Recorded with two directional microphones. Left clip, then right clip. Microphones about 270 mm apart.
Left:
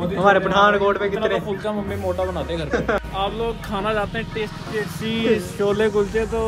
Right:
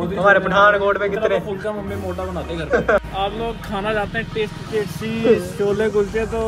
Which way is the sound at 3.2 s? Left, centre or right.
Centre.